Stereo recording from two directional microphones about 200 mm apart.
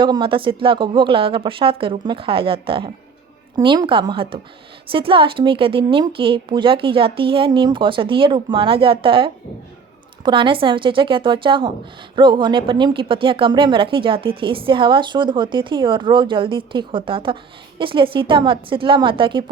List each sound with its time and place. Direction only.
0.0 s speech: 25° right (ahead or behind)